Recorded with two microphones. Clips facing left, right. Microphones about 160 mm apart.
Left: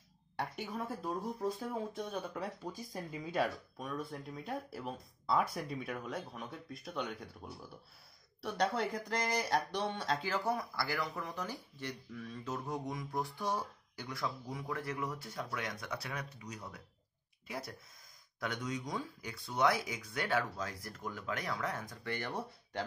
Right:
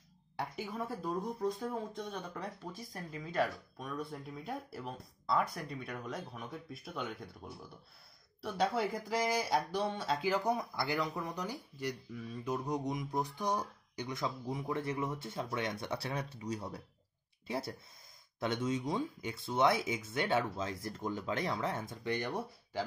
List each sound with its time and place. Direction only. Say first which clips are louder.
0.4 s speech: even; centre (ahead or behind)
8.4 s speech: right 1 dB; 5° right (ahead or behind)